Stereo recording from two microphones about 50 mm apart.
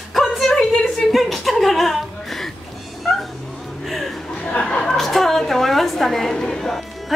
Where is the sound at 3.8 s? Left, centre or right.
Centre.